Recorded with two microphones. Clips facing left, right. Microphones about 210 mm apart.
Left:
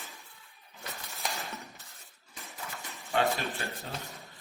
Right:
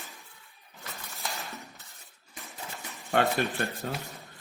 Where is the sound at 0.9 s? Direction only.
Centre (ahead or behind).